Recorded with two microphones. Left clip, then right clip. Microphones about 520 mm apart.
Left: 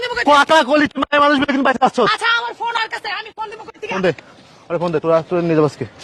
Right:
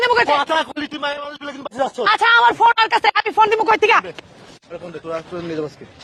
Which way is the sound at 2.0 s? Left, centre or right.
Right.